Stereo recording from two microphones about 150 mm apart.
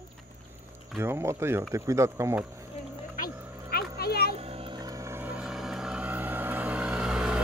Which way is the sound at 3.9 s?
90° left.